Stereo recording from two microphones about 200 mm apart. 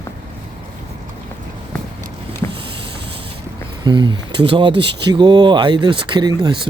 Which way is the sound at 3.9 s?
20° right (ahead or behind).